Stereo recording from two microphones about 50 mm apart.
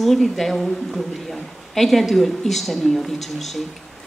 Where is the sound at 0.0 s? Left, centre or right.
Centre.